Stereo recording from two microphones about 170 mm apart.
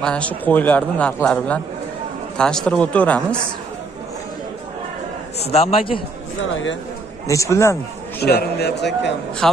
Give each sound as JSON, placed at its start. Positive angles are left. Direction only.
{"t": 0.0, "sound": "a man's voice", "side_deg": 5}
{"t": 5.4, "sound": "a man's voice", "side_deg": 35}
{"t": 7.2, "sound": "a man's voice", "side_deg": 20}
{"t": 8.2, "sound": "a man's voice", "side_deg": 70}
{"t": 9.4, "sound": "a man's voice", "side_deg": 5}